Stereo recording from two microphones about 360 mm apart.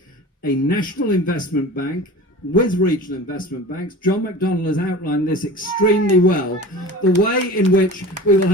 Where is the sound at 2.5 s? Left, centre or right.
Left.